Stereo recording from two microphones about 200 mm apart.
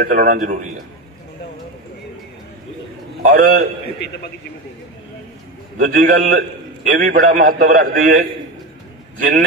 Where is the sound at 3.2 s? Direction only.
45° right (ahead or behind).